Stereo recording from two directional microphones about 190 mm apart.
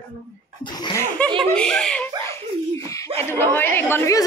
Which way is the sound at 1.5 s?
5° left (ahead or behind).